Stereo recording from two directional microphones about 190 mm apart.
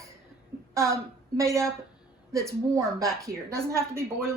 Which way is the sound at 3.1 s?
Centre (ahead or behind).